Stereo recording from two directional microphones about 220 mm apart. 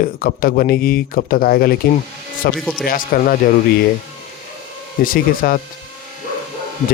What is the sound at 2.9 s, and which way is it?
Speech, 40° left (ahead or behind).